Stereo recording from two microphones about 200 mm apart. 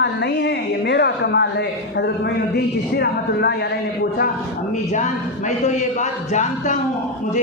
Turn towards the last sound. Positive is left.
turn(degrees=35)  # may be behind; listen again after turning